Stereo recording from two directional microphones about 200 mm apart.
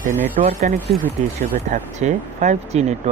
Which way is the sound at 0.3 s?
35° right (ahead or behind).